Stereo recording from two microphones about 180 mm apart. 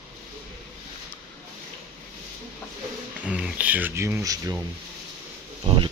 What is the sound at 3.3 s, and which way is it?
Speech, 5° right (ahead or behind).